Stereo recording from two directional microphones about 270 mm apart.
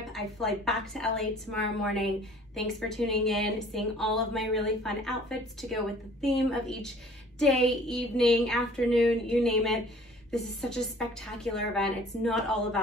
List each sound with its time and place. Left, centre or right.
0.1 s a woman's voice: centre